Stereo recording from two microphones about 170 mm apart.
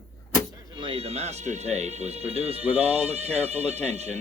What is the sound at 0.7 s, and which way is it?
Speech, 30° right (ahead or behind).